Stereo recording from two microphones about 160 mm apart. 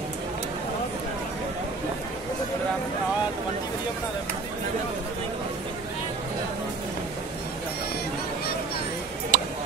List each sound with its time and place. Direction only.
9.3 s tick-tock: 55° right (ahead or behind)